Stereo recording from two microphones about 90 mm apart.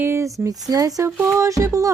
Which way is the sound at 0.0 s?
30° right (ahead or behind).